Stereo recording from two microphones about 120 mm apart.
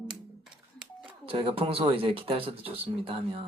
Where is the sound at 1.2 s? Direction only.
50° right (ahead or behind).